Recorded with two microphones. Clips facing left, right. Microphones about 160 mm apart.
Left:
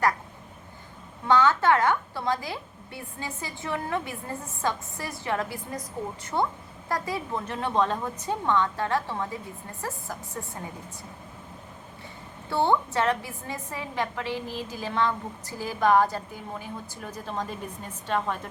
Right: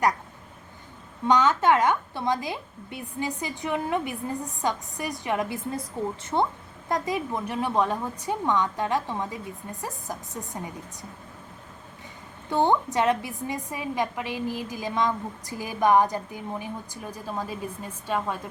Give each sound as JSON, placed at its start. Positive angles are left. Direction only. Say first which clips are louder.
{"t": 1.3, "sound": "a woman's voice", "louder": "even", "side_deg": -20}
{"t": 12.5, "sound": "a woman's voice", "louder": "right 1 dB", "side_deg": -15}